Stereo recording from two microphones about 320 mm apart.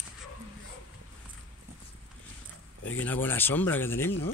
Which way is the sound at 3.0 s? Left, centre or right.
Centre.